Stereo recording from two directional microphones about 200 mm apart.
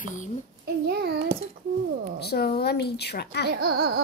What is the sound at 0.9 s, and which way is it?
Speech, 55° right (ahead or behind).